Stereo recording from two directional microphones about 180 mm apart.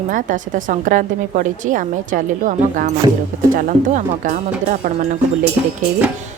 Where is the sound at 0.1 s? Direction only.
45° right (ahead or behind).